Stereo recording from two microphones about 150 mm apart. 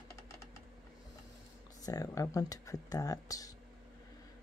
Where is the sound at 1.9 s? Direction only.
25° left (ahead or behind).